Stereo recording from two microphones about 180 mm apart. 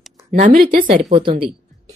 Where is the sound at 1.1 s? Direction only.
30° right (ahead or behind).